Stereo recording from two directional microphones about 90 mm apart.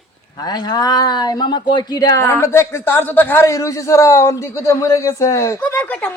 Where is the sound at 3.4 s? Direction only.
35° left (ahead or behind).